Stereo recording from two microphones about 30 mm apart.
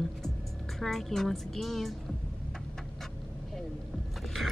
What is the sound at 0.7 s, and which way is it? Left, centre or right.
Speech, centre.